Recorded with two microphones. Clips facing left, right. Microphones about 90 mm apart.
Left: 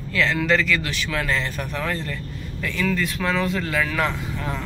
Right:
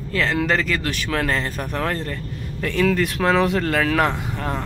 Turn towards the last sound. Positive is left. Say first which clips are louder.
# right 3 dB
turn(degrees=-50)  # may be behind; listen again after turning